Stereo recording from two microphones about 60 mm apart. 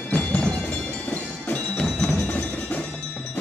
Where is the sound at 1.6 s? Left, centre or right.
Centre.